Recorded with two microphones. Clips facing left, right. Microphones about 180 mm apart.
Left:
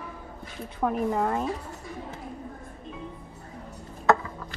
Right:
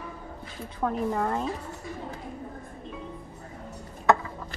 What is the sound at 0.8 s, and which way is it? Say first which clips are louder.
Speech: left 2 dB; 5° left (ahead or behind).